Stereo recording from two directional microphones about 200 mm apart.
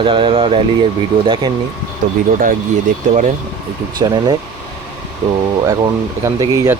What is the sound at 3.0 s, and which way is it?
Speech, 40° right (ahead or behind).